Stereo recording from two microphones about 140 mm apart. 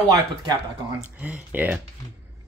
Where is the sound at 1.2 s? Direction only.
10° right (ahead or behind).